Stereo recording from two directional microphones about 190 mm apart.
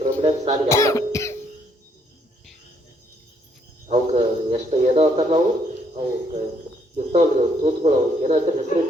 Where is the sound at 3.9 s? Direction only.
35° right (ahead or behind).